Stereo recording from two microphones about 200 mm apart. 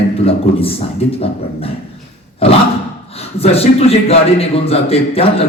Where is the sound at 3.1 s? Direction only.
30° left (ahead or behind).